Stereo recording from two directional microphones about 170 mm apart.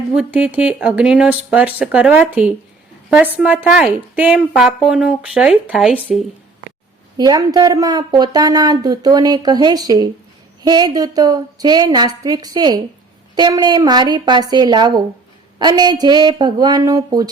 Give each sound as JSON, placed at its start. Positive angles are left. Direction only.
{"t": 0.2, "sound": "a woman's voice", "side_deg": -5}
{"t": 7.2, "sound": "speech", "side_deg": -25}